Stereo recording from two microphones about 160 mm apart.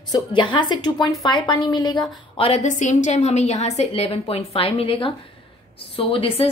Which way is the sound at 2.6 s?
50° left (ahead or behind).